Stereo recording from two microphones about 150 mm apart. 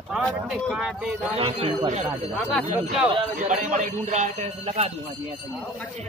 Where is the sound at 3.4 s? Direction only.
55° right (ahead or behind); by 5.3 s 40° right (ahead or behind).